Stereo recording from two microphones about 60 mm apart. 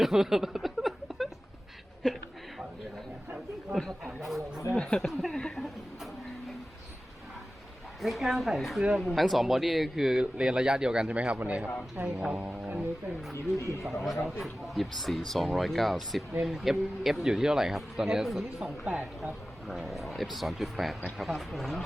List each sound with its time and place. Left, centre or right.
0.0 s a sound: centre
4.2 s speech: centre
4.8 s speech: centre
5.1 s speech: centre
5.5 s a sound: centre
8.0 s a man's voice: centre; by 11.7 s right
12.0 s music: right
13.3 s speech: left
13.8 s speech: centre
19.9 s speech: centre